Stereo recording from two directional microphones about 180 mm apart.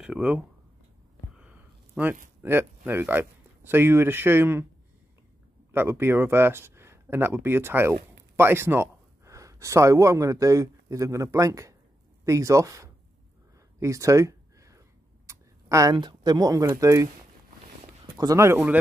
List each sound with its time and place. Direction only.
0.0 s speech: 5° right (ahead or behind)
2.0 s speech: 5° right (ahead or behind)
5.7 s speech: 15° right (ahead or behind)
13.7 s a sound: 15° right (ahead or behind)
15.2 s speech: 15° right (ahead or behind)
18.1 s speech: 15° right (ahead or behind)